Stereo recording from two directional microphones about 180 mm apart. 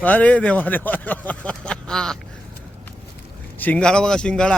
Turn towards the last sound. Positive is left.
turn(degrees=5)  # may be behind; listen again after turning